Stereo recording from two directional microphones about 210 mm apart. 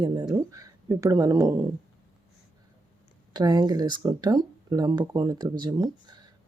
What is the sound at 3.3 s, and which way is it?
Speech, 20° right (ahead or behind).